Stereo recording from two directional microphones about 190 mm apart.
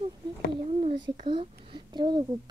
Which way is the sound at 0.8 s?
30° right (ahead or behind).